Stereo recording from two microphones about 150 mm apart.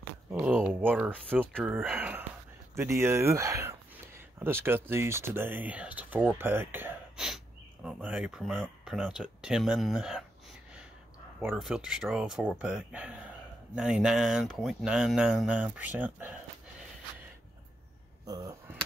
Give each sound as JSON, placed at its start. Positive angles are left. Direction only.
{"t": 0.3, "sound": "speech", "side_deg": -10}
{"t": 7.2, "sound": "speech", "side_deg": -5}
{"t": 11.4, "sound": "speech", "side_deg": -5}
{"t": 18.2, "sound": "speech", "side_deg": -25}